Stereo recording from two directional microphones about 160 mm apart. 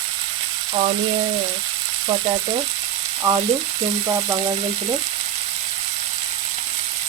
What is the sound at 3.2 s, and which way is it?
Frying, 20° right (ahead or behind).